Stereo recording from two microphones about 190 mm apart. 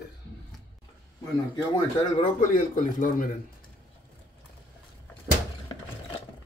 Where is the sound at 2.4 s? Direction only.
45° left (ahead or behind).